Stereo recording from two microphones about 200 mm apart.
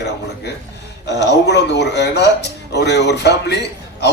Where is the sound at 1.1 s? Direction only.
60° left (ahead or behind).